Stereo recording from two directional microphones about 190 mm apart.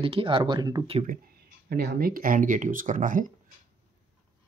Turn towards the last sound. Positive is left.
turn(degrees=-45)  # may be behind; listen again after turning